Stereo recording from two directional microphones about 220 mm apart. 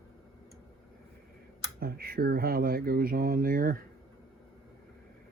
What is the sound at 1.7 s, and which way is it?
Speech, 45° right (ahead or behind).